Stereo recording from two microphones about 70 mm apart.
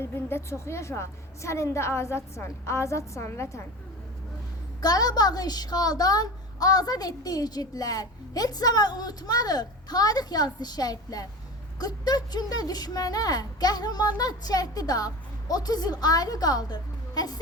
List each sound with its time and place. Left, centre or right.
0.0 s a woman's voice: left
4.8 s a woman's voice: left